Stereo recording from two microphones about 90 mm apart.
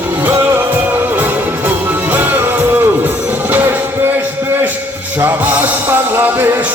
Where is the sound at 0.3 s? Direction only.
25° right (ahead or behind).